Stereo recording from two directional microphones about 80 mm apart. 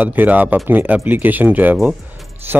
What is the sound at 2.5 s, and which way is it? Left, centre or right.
Music, right.